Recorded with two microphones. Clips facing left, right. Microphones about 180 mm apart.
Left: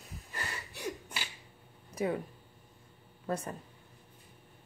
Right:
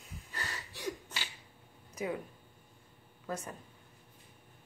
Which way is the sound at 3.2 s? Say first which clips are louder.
Left 4 dB; 35° left (ahead or behind).